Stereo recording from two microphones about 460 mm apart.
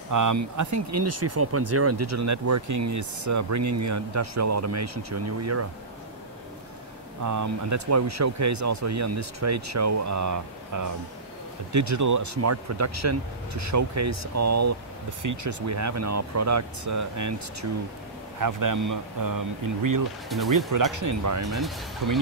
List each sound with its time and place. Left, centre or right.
0.1 s speech: right
7.2 s speech: right
21.5 s speech: centre
22.0 s speech: right